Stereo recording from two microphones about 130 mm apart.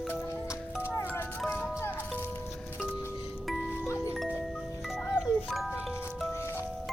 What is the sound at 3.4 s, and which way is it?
Music, centre (ahead or behind).